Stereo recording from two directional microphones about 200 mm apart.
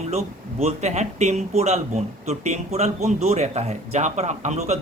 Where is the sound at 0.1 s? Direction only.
30° right (ahead or behind).